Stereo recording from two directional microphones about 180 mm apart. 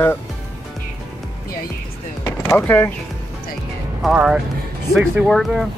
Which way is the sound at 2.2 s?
10° left (ahead or behind).